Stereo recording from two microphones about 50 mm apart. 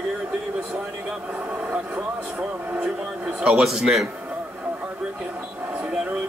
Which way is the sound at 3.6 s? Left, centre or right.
Centre.